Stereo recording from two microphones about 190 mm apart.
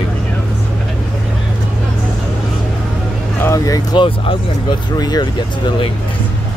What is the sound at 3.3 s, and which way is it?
Speech, 15° left (ahead or behind).